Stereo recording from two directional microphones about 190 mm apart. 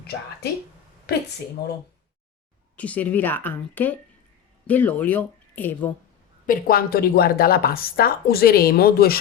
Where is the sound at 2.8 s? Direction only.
10° left (ahead or behind).